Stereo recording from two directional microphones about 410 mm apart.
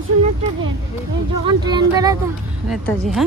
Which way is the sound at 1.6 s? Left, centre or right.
Centre.